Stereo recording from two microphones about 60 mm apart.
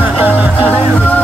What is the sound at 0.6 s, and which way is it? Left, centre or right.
Music, left.